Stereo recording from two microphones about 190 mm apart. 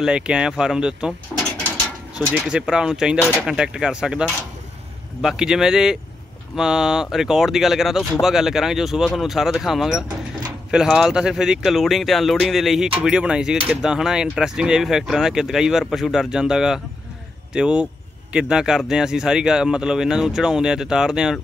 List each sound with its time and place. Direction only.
0.0 s speech: 5° right (ahead or behind)
1.3 s drawer open or close: 5° left (ahead or behind)
2.2 s speech: centre (ahead or behind)